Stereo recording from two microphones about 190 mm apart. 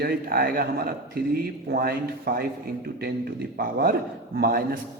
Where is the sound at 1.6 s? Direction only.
55° right (ahead or behind).